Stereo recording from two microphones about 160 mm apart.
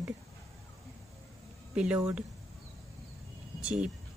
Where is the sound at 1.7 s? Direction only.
10° right (ahead or behind).